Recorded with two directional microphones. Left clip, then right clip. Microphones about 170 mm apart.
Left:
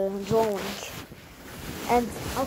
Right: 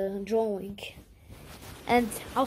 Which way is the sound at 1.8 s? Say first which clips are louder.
Left 1 dB; 20° right (ahead or behind).